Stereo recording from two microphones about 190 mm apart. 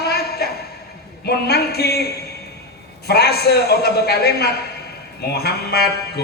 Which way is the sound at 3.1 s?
60° left (ahead or behind).